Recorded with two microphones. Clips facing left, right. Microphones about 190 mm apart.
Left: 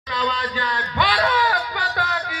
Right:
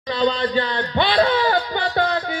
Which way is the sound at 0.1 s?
30° right (ahead or behind).